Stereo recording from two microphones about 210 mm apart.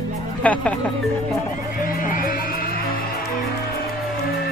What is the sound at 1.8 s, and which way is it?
Music, 40° left (ahead or behind).